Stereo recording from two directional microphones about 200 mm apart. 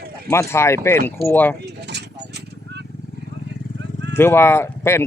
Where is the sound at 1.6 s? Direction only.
55° right (ahead or behind).